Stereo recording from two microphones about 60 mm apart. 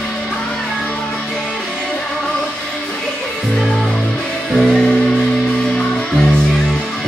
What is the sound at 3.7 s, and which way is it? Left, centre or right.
Music, centre.